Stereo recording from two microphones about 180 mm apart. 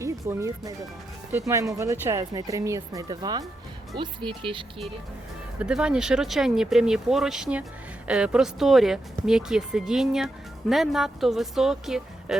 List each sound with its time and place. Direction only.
0.0 s speech: 15° right (ahead or behind)
5.5 s speech: 5° right (ahead or behind)